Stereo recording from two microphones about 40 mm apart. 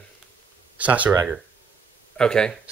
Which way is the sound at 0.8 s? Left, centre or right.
Right.